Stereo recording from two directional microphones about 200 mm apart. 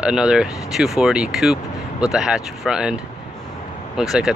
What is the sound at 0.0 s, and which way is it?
Speech, 5° right (ahead or behind).